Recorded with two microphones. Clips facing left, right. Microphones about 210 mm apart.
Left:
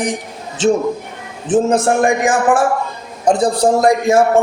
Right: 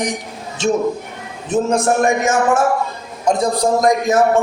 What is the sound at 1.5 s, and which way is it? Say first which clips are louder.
Mantra: left 3 dB; 30° left (ahead or behind).